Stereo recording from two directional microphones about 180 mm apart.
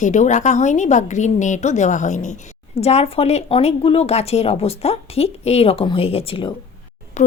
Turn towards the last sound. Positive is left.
turn(degrees=40)  # may be behind; listen again after turning